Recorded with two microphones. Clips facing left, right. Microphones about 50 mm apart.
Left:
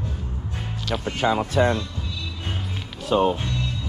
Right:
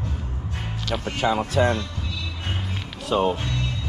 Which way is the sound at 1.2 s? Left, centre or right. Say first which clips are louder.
Left 1 dB; left.